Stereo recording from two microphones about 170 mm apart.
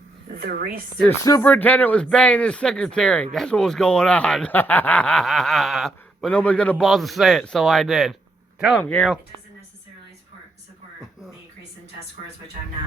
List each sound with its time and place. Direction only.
0.3 s speech: 65° right (ahead or behind)
1.2 s speech: 20° left (ahead or behind)
1.5 s speech: 10° left (ahead or behind)